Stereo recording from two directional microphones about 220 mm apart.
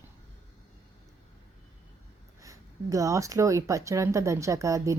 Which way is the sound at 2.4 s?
15° right (ahead or behind).